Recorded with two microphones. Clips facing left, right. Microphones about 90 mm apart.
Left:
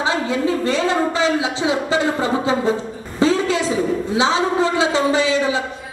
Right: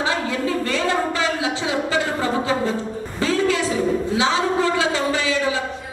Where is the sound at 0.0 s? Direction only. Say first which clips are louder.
Left 3 dB; 20° left (ahead or behind).